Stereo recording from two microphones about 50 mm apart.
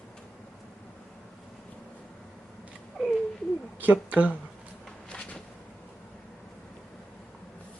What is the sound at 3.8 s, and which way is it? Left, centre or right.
Speech, right.